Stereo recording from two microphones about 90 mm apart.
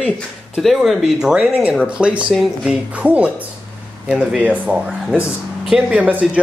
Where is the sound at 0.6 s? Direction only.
Centre (ahead or behind).